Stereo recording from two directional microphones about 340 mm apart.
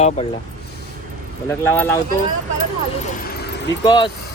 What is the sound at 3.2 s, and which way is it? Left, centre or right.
Vehicle, left.